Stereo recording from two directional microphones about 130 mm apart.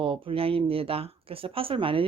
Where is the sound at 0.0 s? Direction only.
45° right (ahead or behind).